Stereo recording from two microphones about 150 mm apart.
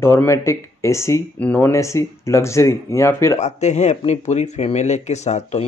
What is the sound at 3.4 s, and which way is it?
Speech, 50° left (ahead or behind).